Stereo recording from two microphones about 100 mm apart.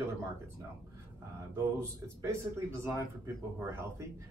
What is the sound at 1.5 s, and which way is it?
A man's voice, 25° right (ahead or behind).